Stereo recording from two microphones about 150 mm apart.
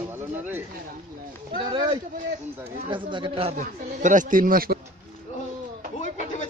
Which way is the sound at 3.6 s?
55° right (ahead or behind).